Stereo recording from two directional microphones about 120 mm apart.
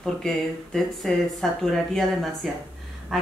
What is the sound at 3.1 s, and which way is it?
Quack, centre (ahead or behind).